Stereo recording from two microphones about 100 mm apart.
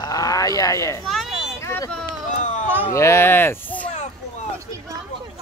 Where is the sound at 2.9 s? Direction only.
25° left (ahead or behind).